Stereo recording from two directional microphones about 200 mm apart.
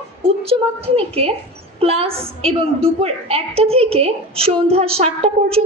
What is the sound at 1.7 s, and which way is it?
A woman's voice, 30° right (ahead or behind).